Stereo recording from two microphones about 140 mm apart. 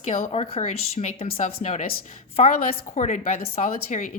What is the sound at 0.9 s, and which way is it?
Speech, 85° left.